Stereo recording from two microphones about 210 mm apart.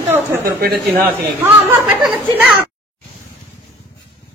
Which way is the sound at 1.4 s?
10° right (ahead or behind).